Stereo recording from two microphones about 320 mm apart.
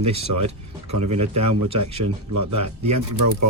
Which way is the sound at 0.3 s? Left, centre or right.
Right.